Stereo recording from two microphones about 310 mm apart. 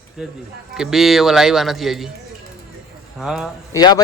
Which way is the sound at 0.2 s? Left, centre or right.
Centre.